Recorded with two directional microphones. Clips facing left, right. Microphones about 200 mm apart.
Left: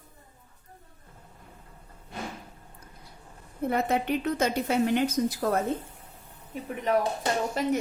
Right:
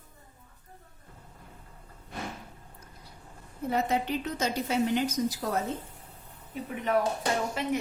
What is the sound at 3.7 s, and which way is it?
A woman's voice, 55° left (ahead or behind).